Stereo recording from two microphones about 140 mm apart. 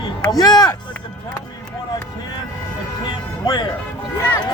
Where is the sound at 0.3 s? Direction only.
30° left (ahead or behind).